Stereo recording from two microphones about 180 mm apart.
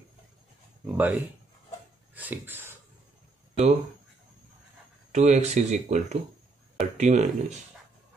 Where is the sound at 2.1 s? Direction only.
10° right (ahead or behind).